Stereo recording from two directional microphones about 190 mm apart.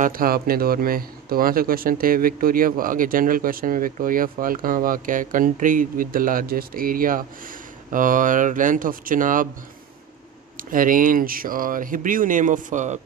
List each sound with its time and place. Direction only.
0.0 s speech: 50° right (ahead or behind)
10.6 s speech: 45° right (ahead or behind)